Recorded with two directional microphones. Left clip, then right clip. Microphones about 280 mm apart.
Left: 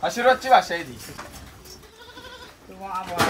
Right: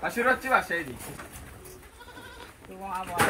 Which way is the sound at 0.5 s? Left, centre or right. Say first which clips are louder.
Left 10 dB; centre.